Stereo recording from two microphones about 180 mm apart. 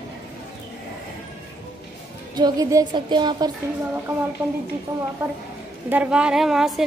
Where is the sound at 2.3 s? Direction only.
20° right (ahead or behind).